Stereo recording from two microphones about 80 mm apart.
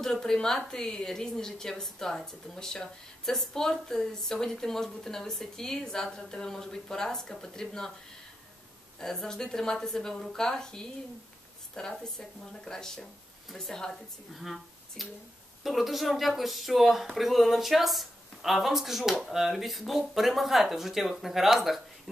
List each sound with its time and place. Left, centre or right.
0.0 s a woman's voice: centre
9.0 s a woman's voice: centre